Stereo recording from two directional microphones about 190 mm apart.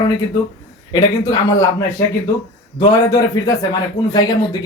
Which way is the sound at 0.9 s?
20° left (ahead or behind).